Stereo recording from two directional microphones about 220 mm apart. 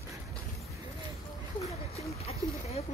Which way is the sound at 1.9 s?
30° left (ahead or behind).